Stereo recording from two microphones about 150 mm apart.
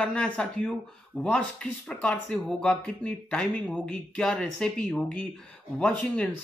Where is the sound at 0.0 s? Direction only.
5° left (ahead or behind).